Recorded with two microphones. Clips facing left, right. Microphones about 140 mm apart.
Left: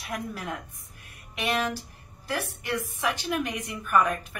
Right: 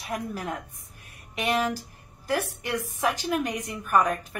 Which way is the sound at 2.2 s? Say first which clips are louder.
Right 3 dB; 40° right (ahead or behind).